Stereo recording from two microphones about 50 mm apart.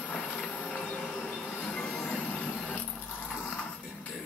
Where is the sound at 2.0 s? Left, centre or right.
Left.